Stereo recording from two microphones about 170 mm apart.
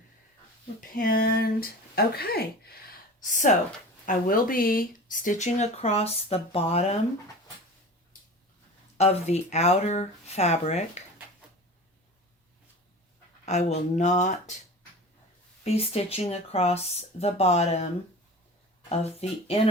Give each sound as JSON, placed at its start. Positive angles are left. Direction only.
{"t": 0.8, "sound": "speech", "side_deg": 55}
{"t": 3.2, "sound": "speech", "side_deg": 50}
{"t": 9.0, "sound": "speech", "side_deg": 40}
{"t": 13.4, "sound": "speech", "side_deg": 40}
{"t": 15.6, "sound": "speech", "side_deg": 35}
{"t": 18.9, "sound": "speech", "side_deg": 40}